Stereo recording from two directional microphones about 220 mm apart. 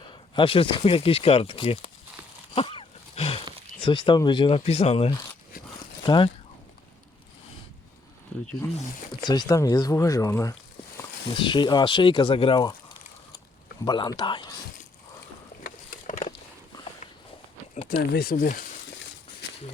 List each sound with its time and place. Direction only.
0.1 s speech: 25° left (ahead or behind)
2.6 s wild animals: 25° left (ahead or behind)
3.8 s speech: 20° left (ahead or behind)
9.2 s speech: 20° left (ahead or behind)
13.8 s speech: 20° left (ahead or behind)
15.6 s a sound: 35° left (ahead or behind)
17.8 s speech: 45° left (ahead or behind)